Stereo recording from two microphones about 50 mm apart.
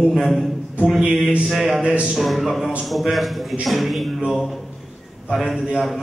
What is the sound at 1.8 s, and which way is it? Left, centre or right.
Speech, right.